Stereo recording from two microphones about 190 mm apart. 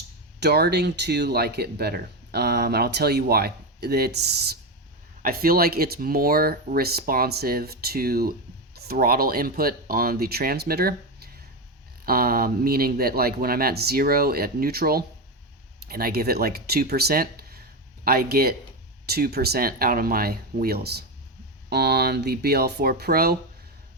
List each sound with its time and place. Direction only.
0.3 s speech: 60° right (ahead or behind)